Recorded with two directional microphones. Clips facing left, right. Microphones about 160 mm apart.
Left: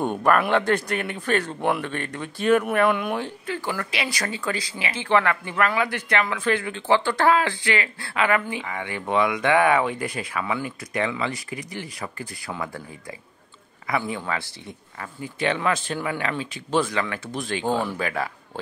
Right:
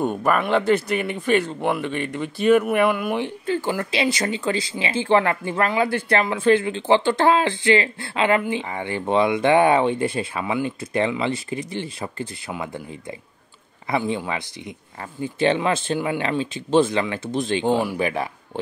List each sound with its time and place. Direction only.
0.0 s speech: 5° right (ahead or behind)
3.4 s speech: 25° right (ahead or behind)
13.8 s speech: 25° right (ahead or behind)